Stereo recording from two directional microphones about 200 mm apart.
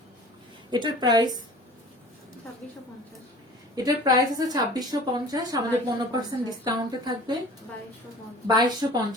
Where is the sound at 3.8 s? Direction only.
20° right (ahead or behind).